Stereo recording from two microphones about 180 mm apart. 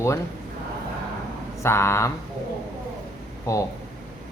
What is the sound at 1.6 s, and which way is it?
Speech, 15° left (ahead or behind).